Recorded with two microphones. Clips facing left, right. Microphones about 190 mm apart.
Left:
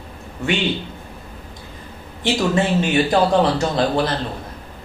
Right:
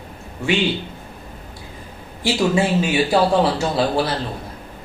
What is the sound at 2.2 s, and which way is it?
A man's voice, 5° right (ahead or behind).